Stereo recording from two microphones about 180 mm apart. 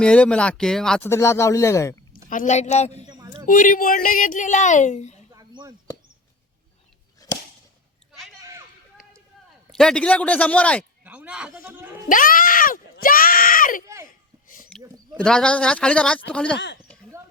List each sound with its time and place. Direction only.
0.0 s a man's voice: 5° left (ahead or behind)
1.0 s speech: 15° left (ahead or behind)
2.3 s a woman's voice: 45° left (ahead or behind)
3.1 s a sound: 20° right (ahead or behind)
3.4 s speech: 50° left (ahead or behind)
5.3 s a sound: 20° right (ahead or behind)
7.2 s whip: 20° left (ahead or behind)
9.7 s speech: 5° left (ahead or behind)
11.0 s a man's voice: 5° right (ahead or behind)
12.0 s speech: 50° left (ahead or behind)
13.8 s a child's voice: 15° right (ahead or behind)
14.4 s a sound: 50° left (ahead or behind)
15.2 s a man's voice: 5° left (ahead or behind)